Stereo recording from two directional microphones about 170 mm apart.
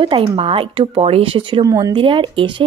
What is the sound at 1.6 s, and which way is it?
Speech, 20° right (ahead or behind).